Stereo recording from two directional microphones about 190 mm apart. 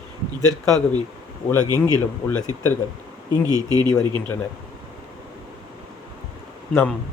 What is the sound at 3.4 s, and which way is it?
Speech, 20° right (ahead or behind).